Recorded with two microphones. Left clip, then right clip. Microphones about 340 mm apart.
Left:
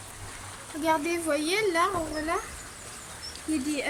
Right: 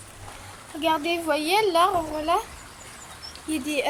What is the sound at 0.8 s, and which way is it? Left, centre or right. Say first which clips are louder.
A woman's voice: right 3 dB; centre.